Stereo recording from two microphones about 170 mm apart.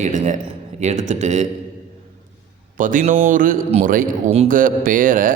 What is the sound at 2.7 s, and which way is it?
A man's voice, 50° right (ahead or behind).